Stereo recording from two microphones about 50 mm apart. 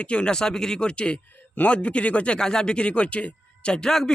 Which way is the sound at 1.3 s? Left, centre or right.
Left.